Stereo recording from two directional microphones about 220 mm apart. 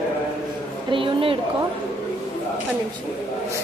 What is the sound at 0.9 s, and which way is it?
Speech, 25° right (ahead or behind).